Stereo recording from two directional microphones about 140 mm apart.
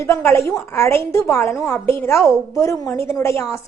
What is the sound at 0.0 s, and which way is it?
A woman's voice, 20° left (ahead or behind).